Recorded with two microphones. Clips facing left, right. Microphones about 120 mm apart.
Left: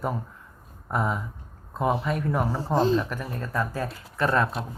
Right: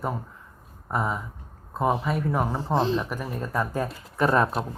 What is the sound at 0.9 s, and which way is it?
Speech, centre (ahead or behind).